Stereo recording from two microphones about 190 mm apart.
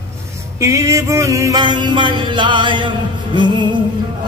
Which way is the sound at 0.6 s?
15° right (ahead or behind).